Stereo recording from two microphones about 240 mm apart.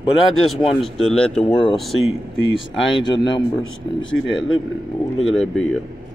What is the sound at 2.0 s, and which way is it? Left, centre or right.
Speech, left.